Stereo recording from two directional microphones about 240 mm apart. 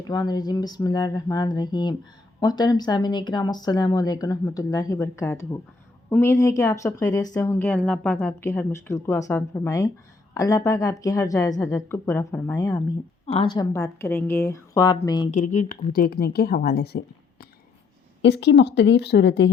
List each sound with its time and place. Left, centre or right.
0.1 s speech: centre
15.3 s speech: left
18.2 s speech: left